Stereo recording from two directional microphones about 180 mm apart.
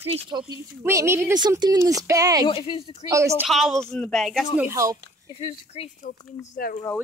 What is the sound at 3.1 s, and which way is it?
Speech, 15° right (ahead or behind).